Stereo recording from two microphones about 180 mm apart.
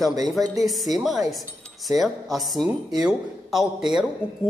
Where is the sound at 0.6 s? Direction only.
Centre (ahead or behind).